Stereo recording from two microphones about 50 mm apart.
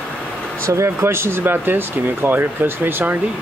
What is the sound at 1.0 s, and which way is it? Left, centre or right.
Speech, right.